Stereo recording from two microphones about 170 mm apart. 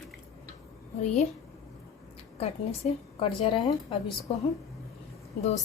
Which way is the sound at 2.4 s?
35° left (ahead or behind).